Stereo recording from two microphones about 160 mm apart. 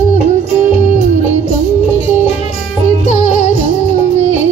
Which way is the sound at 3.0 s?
45° left (ahead or behind).